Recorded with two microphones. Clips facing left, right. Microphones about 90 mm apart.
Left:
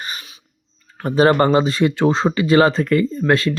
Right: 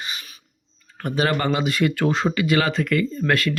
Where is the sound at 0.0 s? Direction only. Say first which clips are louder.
Left 3 dB; 40° left (ahead or behind).